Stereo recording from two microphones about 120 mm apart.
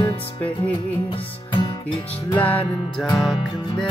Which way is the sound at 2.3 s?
10° left (ahead or behind).